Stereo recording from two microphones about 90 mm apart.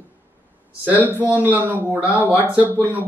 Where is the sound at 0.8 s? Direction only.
20° right (ahead or behind).